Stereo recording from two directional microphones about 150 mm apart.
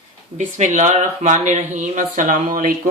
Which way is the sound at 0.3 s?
55° right (ahead or behind).